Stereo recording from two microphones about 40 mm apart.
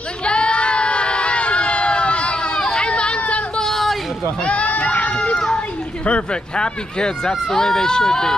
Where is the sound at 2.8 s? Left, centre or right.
Left.